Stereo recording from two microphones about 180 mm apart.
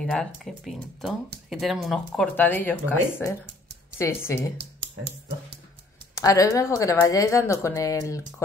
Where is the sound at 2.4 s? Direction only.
10° left (ahead or behind).